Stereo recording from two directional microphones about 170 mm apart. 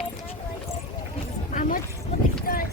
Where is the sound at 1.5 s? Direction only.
50° left (ahead or behind).